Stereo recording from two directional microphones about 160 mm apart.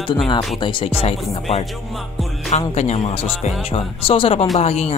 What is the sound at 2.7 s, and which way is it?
Speech, 45° left (ahead or behind).